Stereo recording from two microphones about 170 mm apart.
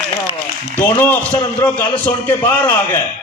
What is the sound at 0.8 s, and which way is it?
A man's voice, 10° left (ahead or behind).